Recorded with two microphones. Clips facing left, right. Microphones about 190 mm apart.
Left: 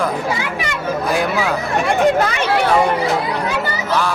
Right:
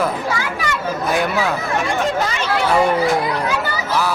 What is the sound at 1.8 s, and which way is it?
Speech, 60° left (ahead or behind).